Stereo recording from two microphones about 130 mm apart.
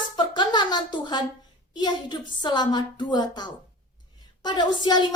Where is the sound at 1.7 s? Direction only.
35° left (ahead or behind).